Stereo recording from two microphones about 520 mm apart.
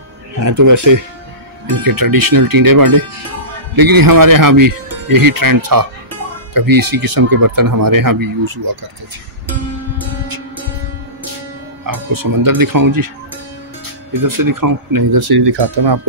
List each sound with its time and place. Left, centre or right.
0.4 s speech: right
11.8 s speech: right
14.2 s speech: right